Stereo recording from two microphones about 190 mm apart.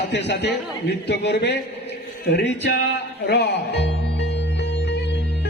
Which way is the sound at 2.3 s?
65° left (ahead or behind).